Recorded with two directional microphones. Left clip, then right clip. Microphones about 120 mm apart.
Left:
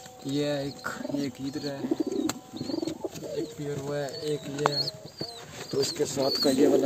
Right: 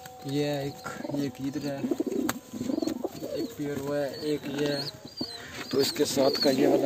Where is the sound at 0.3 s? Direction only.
20° left (ahead or behind).